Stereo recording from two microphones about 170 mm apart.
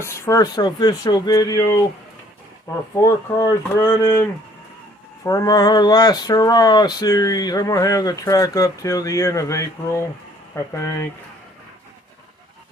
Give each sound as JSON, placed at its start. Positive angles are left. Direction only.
{"t": 0.0, "sound": "speech", "side_deg": 20}
{"t": 2.9, "sound": "speech", "side_deg": 20}